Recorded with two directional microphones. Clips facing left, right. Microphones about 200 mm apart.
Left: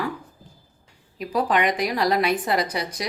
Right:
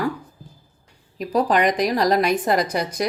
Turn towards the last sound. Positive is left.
turn(degrees=-45)  # may be behind; listen again after turning